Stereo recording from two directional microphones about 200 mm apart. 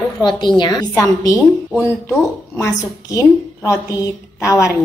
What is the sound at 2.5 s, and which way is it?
A woman's voice, 15° left (ahead or behind).